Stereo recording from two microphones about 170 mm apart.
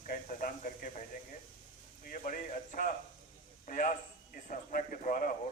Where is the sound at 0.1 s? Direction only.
50° left (ahead or behind).